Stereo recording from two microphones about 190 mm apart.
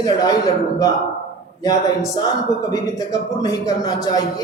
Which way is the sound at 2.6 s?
20° left (ahead or behind).